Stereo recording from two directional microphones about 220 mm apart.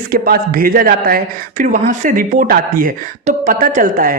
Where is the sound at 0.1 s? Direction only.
40° right (ahead or behind).